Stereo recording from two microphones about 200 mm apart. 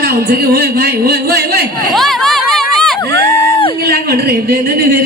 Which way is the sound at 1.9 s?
Centre (ahead or behind).